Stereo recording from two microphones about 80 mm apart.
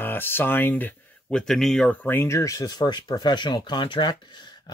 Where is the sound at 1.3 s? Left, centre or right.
Centre.